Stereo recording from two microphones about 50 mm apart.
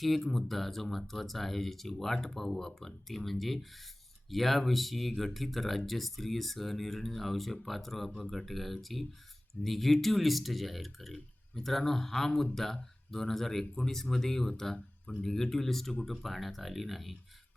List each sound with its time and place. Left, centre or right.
0.0 s speech: centre